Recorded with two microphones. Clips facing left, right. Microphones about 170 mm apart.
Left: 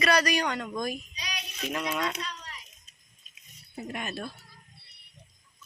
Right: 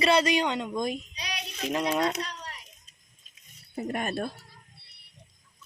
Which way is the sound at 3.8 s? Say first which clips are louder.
Right 5 dB; 50° right (ahead or behind).